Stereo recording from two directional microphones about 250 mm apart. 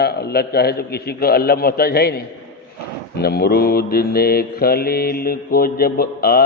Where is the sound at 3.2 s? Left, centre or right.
Left.